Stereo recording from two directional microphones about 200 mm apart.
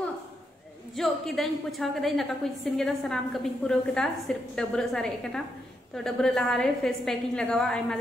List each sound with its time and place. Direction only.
0.9 s a woman's voice: centre (ahead or behind)